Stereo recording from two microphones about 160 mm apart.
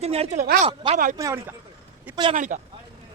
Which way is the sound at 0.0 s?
40° right (ahead or behind).